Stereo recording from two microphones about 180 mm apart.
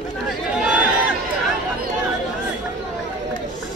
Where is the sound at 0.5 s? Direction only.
5° right (ahead or behind).